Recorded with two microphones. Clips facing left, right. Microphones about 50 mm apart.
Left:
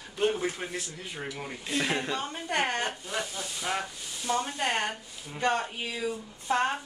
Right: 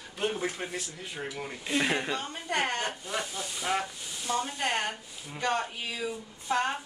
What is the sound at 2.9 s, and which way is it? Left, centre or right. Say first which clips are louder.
Speech: even; centre.